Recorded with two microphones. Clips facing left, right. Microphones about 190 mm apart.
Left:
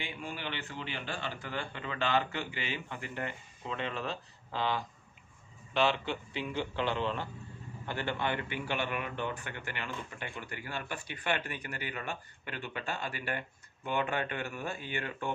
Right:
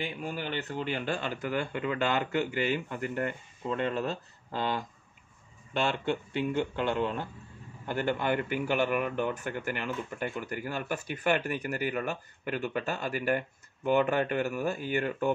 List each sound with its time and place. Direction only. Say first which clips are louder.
0.0 s a man's voice: right 5 dB; 40° right (ahead or behind)